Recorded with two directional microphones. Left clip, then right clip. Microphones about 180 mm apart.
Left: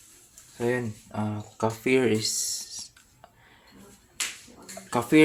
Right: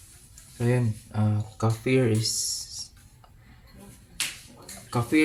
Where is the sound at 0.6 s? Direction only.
40° left (ahead or behind).